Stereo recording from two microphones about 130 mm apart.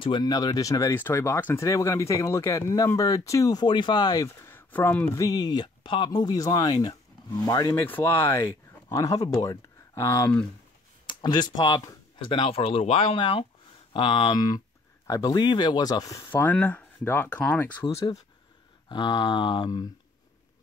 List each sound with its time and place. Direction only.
0.0 s speech: 35° left (ahead or behind)
4.5 s a sound: 15° left (ahead or behind)
5.1 s speech: 30° left (ahead or behind)
7.7 s speech: 15° left (ahead or behind)
11.1 s speech: 35° left (ahead or behind)
16.3 s speech: 15° left (ahead or behind)
18.9 s speech: 35° left (ahead or behind)